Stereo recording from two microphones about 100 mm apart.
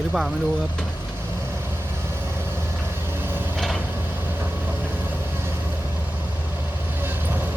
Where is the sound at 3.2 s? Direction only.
20° right (ahead or behind).